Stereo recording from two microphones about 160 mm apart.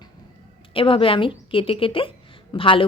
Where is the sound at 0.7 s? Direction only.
35° left (ahead or behind).